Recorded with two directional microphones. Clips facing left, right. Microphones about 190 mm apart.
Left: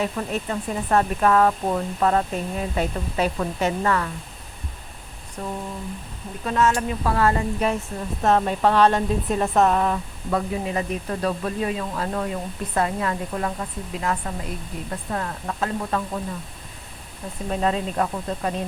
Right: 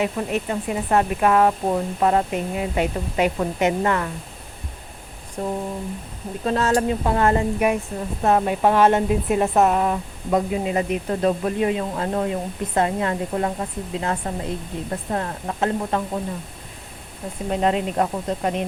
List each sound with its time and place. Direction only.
0.0 s speech: 15° right (ahead or behind)
6.4 s speech: 35° right (ahead or behind)
7.0 s speech: 25° right (ahead or behind)
8.2 s speech: 15° right (ahead or behind)
17.5 s speech: 20° right (ahead or behind)